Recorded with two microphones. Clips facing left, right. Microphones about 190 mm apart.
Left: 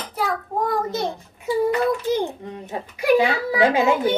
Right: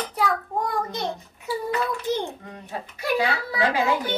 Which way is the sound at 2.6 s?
15° left (ahead or behind).